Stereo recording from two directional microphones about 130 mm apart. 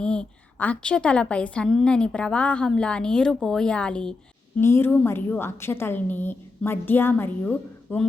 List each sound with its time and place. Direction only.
0.0 s a woman's voice: 5° left (ahead or behind)